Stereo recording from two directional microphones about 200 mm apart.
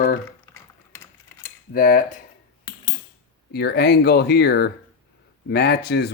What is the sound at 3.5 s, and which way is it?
Speech, 55° left (ahead or behind).